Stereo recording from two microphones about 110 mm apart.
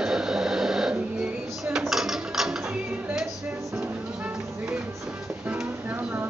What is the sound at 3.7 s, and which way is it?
Music, 20° right (ahead or behind).